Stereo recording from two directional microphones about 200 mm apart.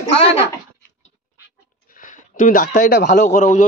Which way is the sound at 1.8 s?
40° left (ahead or behind).